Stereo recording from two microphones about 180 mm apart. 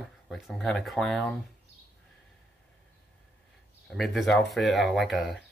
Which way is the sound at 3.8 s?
Centre (ahead or behind).